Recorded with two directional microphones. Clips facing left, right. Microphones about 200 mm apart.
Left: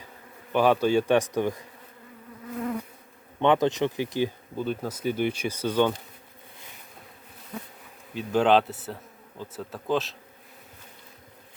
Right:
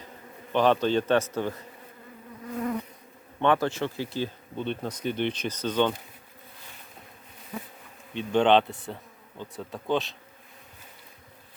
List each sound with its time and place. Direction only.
0.5 s speech: 10° left (ahead or behind)
3.4 s speech: 20° left (ahead or behind)
4.5 s speech: 5° left (ahead or behind)
8.1 s speech: 5° left (ahead or behind)